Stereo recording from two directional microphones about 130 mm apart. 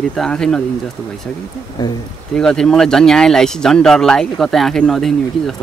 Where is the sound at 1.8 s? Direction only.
30° left (ahead or behind).